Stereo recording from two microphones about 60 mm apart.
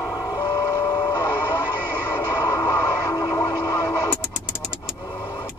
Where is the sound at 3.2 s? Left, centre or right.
Left.